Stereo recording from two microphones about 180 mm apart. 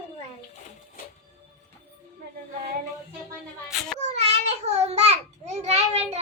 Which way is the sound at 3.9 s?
40° right (ahead or behind).